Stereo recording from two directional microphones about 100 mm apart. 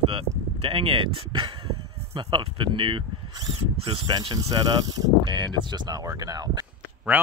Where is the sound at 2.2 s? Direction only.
55° right (ahead or behind).